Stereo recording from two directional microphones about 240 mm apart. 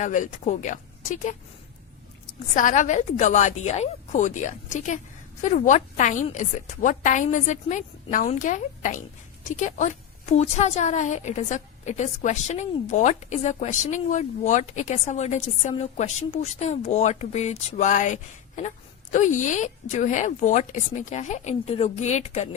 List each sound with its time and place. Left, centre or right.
0.0 s a woman's voice: left
2.6 s a woman's voice: left